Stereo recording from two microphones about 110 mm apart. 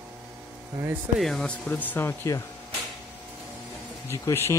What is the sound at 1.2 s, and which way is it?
Speech, 5° left (ahead or behind).